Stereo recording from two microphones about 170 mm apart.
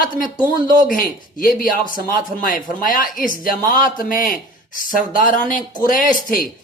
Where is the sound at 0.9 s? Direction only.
55° left (ahead or behind).